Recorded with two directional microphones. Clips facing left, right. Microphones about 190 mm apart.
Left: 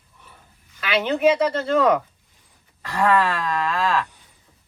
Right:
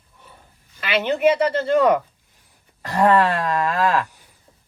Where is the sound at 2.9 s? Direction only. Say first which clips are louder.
Right 3 dB; 45° right (ahead or behind).